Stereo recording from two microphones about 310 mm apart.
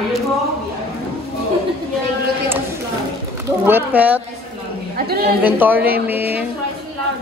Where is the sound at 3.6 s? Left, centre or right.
Centre.